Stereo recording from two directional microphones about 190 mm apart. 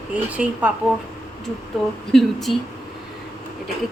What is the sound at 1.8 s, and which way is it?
Speech, centre (ahead or behind).